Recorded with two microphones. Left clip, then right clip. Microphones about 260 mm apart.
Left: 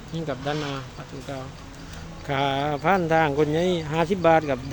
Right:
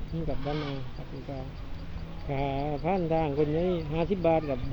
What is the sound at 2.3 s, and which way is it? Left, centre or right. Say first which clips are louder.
Speech: left 7 dB; left.